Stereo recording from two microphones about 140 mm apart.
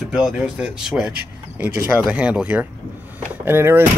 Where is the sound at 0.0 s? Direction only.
5° right (ahead or behind).